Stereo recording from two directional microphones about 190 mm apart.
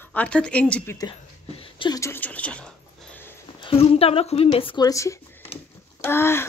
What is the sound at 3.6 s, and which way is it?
A woman's voice, 30° left (ahead or behind).